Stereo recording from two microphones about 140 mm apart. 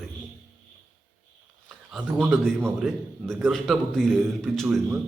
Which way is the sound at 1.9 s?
5° left (ahead or behind).